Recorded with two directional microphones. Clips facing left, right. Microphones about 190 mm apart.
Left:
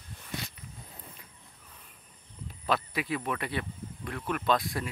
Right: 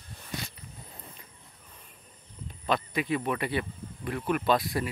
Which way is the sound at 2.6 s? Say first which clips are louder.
Right 2 dB; 5° left (ahead or behind).